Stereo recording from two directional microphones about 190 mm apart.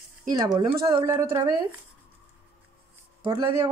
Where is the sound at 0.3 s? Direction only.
20° right (ahead or behind).